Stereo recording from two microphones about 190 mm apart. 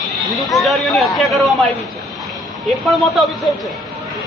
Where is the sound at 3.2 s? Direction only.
Centre (ahead or behind).